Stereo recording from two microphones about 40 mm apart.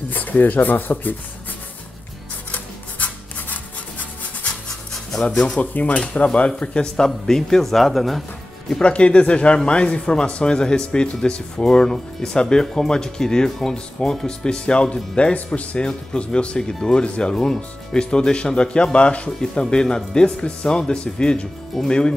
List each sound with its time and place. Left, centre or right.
0.1 s speech: left
2.5 s rub: left
5.6 s speech: left
7.2 s speech: centre
8.8 s speech: left
15.8 s speech: left
21.7 s speech: centre